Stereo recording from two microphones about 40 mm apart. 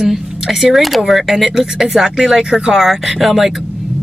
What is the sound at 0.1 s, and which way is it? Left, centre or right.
Speech, centre.